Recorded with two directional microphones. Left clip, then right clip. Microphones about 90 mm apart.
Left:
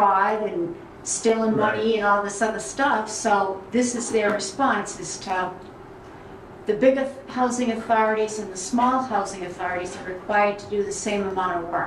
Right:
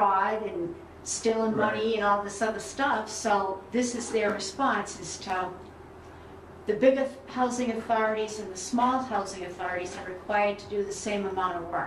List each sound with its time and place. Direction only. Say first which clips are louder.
0.0 s a sound: left 5 dB; 15° left (ahead or behind)
1.0 s a woman's voice: left 5 dB; 15° left (ahead or behind)
6.6 s a woman's voice: left 4 dB; 20° left (ahead or behind)